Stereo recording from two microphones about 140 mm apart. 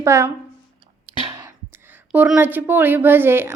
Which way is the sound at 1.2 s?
35° right (ahead or behind).